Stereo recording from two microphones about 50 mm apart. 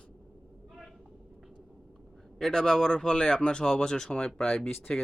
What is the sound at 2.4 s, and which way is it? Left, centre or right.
Speech, centre.